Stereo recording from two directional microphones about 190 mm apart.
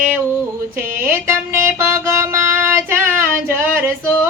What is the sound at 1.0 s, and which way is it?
Speech, 15° right (ahead or behind).